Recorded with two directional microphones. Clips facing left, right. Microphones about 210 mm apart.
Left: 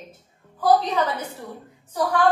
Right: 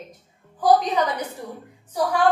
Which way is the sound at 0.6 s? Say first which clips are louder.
Right 1 dB; 15° right (ahead or behind).